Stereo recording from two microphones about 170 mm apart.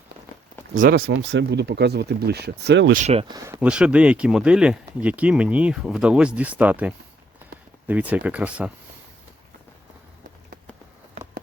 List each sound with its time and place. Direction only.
0.7 s speech: 55° right (ahead or behind); by 2.9 s 90° right
2.9 s speech: 40° right (ahead or behind)
3.2 s speech: 20° right (ahead or behind)
3.6 s speech: 5° right (ahead or behind)